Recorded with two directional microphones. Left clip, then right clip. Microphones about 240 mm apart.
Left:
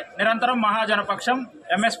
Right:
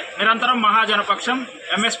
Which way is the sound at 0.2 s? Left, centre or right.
Left.